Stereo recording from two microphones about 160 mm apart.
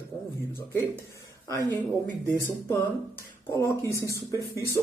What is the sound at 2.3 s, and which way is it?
Speech, 10° left (ahead or behind).